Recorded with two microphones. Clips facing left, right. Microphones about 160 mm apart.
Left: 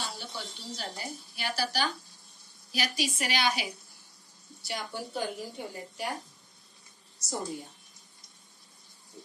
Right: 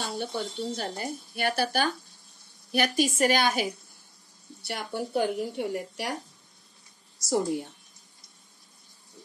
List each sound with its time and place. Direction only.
0.0 s speech: 55° right (ahead or behind)
4.6 s a woman's voice: 60° right (ahead or behind)
7.2 s a woman's voice: 90° right